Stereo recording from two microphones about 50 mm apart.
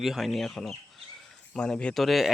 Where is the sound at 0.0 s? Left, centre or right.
Centre.